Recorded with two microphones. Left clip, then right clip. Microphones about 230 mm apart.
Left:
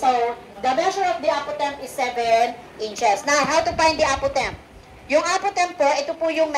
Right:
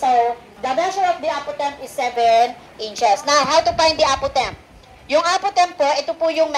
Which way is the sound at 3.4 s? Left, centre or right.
Right.